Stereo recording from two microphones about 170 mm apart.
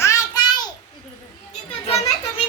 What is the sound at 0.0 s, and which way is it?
Child singing, 20° left (ahead or behind).